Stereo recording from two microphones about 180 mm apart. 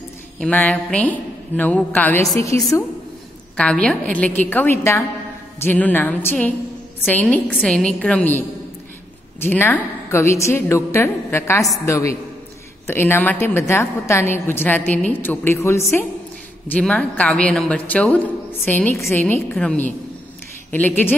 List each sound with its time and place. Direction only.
0.4 s a woman's voice: 10° left (ahead or behind)
3.5 s a woman's voice: 5° left (ahead or behind)